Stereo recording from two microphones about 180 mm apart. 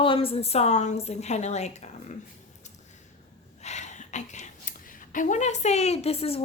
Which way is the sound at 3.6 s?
40° left (ahead or behind).